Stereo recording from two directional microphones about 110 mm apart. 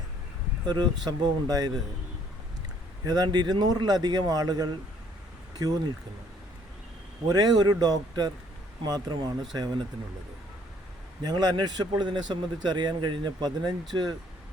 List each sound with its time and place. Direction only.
0.6 s speech: 40° right (ahead or behind)
3.0 s speech: 35° right (ahead or behind)
7.3 s speech: 35° right (ahead or behind)
11.2 s speech: 40° right (ahead or behind)